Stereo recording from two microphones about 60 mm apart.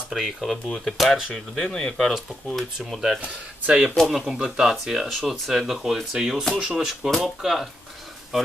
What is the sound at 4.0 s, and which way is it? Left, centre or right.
Speech, centre.